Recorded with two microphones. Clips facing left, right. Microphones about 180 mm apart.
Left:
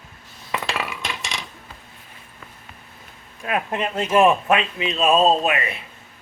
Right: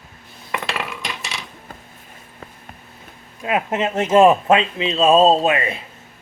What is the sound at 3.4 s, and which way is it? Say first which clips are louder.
Speech: right 4 dB; 20° right (ahead or behind).